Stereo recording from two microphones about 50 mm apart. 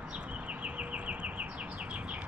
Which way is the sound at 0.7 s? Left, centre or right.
Right.